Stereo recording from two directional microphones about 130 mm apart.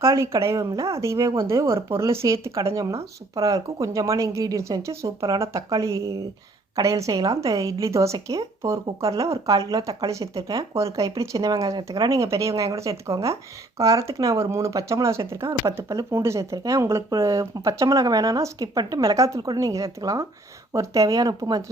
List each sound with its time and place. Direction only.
0.0 s speech: 25° right (ahead or behind)